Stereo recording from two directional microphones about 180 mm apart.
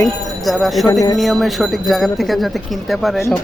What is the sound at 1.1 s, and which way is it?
Speech, centre (ahead or behind).